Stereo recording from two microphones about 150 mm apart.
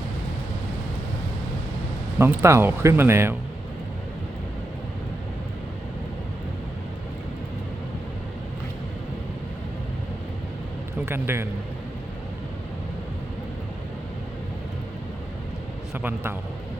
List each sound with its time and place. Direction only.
2.1 s speech: 15° right (ahead or behind)
11.0 s a man's voice: 15° right (ahead or behind)